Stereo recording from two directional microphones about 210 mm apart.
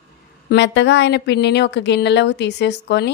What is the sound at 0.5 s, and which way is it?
Speech, 55° left (ahead or behind).